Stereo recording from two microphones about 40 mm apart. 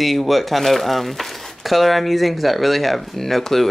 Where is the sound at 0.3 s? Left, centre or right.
Centre.